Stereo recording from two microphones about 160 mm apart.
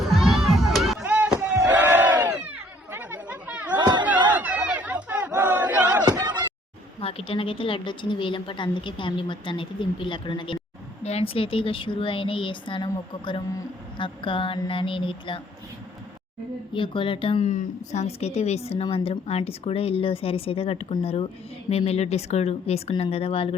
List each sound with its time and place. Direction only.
0.0 s crowd: centre (ahead or behind)
1.0 s a sound: 10° right (ahead or behind)
1.7 s chatter: 10° right (ahead or behind)
3.8 s battle cry: 25° right (ahead or behind)
4.3 s battle cry: 10° right (ahead or behind)
6.1 s music: 25° right (ahead or behind)
7.0 s a woman's voice: 35° left (ahead or behind)
16.7 s a woman's voice: 30° left (ahead or behind)
17.5 s a woman's voice: 45° left (ahead or behind)